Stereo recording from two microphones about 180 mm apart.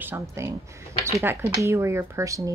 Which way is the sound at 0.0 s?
15° right (ahead or behind).